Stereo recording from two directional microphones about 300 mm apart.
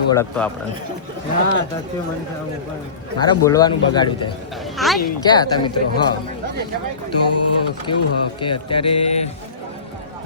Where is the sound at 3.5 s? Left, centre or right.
Centre.